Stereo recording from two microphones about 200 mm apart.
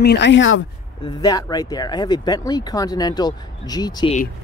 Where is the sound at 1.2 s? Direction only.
20° left (ahead or behind).